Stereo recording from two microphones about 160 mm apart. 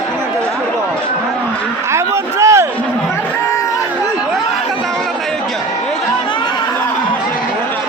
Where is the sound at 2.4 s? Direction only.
15° right (ahead or behind).